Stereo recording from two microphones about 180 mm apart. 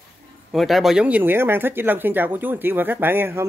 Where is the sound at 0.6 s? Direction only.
Centre (ahead or behind).